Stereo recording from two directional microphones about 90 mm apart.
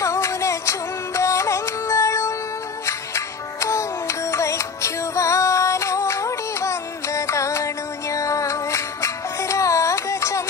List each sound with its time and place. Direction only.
0.0 s music: 35° left (ahead or behind)